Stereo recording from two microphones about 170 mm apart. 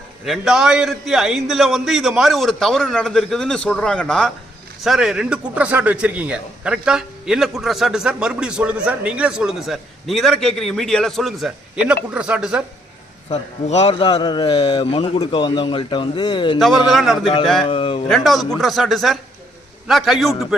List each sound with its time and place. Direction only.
0.3 s a man's voice: 5° right (ahead or behind)
13.3 s a man's voice: 40° left (ahead or behind)
13.9 s a man's voice: 30° left (ahead or behind)
16.6 s a man's voice: centre (ahead or behind)
17.7 s a man's voice: 30° left (ahead or behind)
18.1 s a man's voice: centre (ahead or behind)